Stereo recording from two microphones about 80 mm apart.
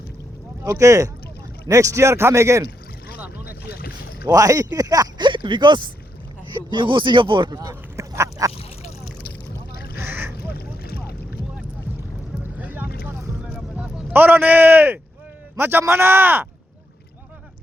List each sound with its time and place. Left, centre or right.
0.6 s a man's voice: right
4.3 s speech: right
5.2 s speech: right
6.7 s speech: right
7.5 s duck: right
10.0 s boat: right
12.4 s boat: right
13.5 s a sound: centre
14.1 s a man's voice: right